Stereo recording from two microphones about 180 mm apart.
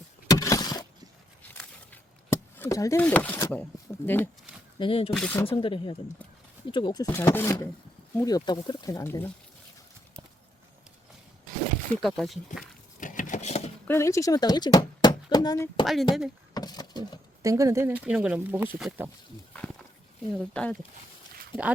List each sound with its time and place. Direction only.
0.3 s a sound: 20° left (ahead or behind)
1.4 s a sound: 10° left (ahead or behind)
3.5 s speech: 10° left (ahead or behind)
4.8 s speech: 30° left (ahead or behind)
5.1 s speech: 10° left (ahead or behind)
5.5 s speech: 30° left (ahead or behind)
12.0 s speech: centre (ahead or behind)
13.0 s a sound: 45° left (ahead or behind)
13.8 s speech: 15° left (ahead or behind)
16.6 s a sound: 20° left (ahead or behind)
17.4 s speech: 20° right (ahead or behind)
20.3 s speech: 5° left (ahead or behind)